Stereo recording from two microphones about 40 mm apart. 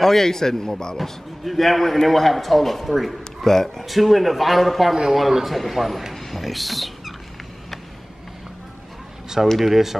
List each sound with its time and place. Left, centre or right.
0.0 s a man's voice: centre
0.9 s a man's voice: centre
6.1 s rodents: centre
9.3 s speech: centre